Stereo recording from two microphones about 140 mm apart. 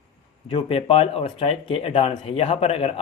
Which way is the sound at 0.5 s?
40° left (ahead or behind).